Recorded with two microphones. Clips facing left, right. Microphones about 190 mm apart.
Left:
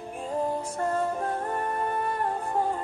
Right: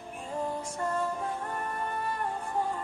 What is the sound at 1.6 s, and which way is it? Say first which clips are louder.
Music: left 6 dB; 40° left (ahead or behind).